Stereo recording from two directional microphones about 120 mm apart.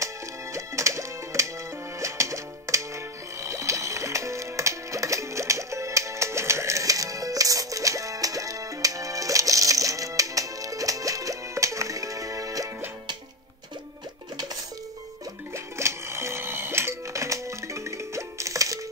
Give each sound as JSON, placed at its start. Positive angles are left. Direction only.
{"t": 0.0, "sound": "music", "side_deg": -25}
{"t": 14.3, "sound": "music", "side_deg": -35}
{"t": 15.5, "sound": "music", "side_deg": -25}